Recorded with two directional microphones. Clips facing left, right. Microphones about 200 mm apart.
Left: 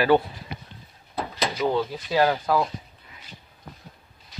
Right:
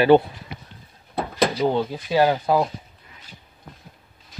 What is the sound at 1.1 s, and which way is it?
Door, 60° right (ahead or behind).